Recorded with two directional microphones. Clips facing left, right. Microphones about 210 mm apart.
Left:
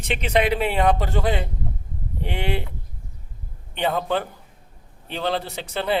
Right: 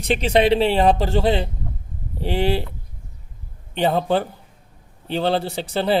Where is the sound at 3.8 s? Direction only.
30° right (ahead or behind).